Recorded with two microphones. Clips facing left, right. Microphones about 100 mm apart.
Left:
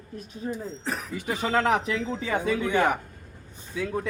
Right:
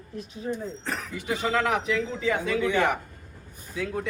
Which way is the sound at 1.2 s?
45° left (ahead or behind).